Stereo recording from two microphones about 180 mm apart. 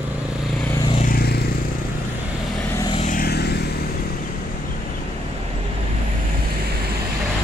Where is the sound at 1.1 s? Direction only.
60° left (ahead or behind).